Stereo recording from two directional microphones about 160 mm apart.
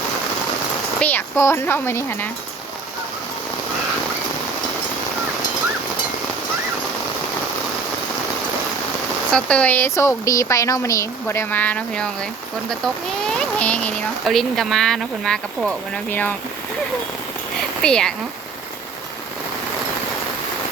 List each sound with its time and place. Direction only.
0.9 s speech: 10° left (ahead or behind)
9.3 s speech: 5° left (ahead or behind)
17.8 s speech: 5° left (ahead or behind)